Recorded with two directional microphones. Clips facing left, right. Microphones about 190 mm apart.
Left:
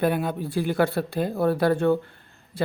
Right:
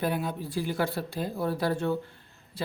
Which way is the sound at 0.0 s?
60° left (ahead or behind).